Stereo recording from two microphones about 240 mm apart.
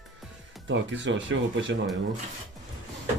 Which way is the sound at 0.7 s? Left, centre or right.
Right.